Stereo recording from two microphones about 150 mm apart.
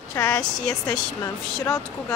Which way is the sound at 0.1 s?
20° left (ahead or behind).